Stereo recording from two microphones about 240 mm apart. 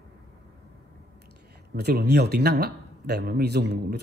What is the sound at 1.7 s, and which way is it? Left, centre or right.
Speech, right.